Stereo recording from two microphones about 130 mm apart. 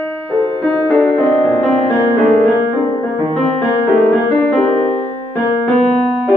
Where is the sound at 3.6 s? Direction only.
10° left (ahead or behind).